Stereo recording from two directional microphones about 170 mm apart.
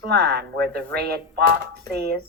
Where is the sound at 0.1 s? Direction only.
70° right (ahead or behind).